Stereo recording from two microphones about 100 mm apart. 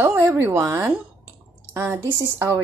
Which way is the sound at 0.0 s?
25° right (ahead or behind).